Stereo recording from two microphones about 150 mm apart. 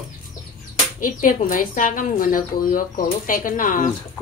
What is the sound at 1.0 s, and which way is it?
Speech, 65° left (ahead or behind).